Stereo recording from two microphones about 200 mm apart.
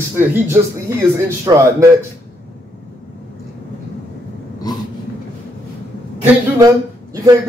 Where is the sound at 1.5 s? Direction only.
15° right (ahead or behind).